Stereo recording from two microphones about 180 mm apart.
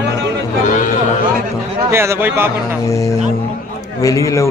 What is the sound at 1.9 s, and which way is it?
Speech, 15° right (ahead or behind).